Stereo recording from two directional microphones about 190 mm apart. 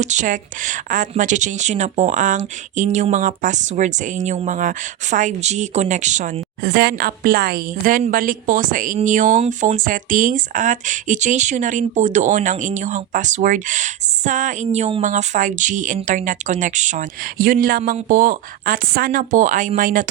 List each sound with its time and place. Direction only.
0.0 s a woman's voice: 40° right (ahead or behind)
6.6 s a woman's voice: 55° right (ahead or behind)